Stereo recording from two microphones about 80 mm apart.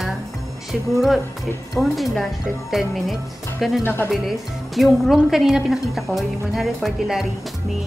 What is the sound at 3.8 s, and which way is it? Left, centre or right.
Speech, left.